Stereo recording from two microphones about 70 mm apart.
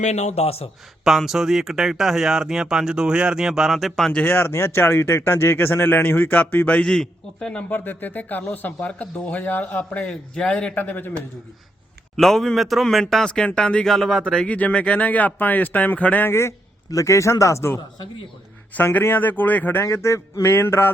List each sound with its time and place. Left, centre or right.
1.0 s speech: centre
4.1 s speech: left
6.8 s a man's voice: centre
7.7 s speech: left
10.1 s a man's voice: centre
10.8 s speech: left
12.1 s a man's voice: centre
14.4 s speech: left
16.3 s speech: left
16.9 s a sound: left
18.7 s speech: left
19.8 s a sound: left